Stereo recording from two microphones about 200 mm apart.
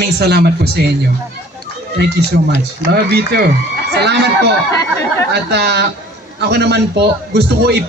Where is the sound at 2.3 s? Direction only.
55° right (ahead or behind).